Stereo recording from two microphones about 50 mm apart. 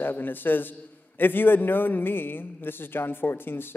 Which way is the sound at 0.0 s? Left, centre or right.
Left.